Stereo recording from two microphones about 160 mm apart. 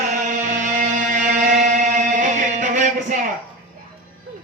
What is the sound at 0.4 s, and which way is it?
Music, 50° right (ahead or behind).